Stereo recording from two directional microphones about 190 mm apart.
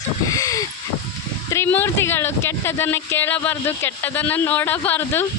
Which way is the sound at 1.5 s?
10° left (ahead or behind).